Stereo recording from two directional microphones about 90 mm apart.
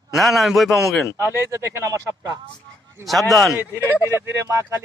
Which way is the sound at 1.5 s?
35° right (ahead or behind).